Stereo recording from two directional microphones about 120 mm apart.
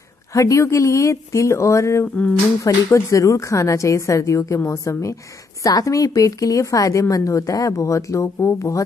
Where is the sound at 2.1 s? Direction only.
15° left (ahead or behind).